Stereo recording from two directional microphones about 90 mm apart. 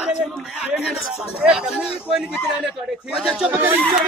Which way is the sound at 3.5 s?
20° right (ahead or behind).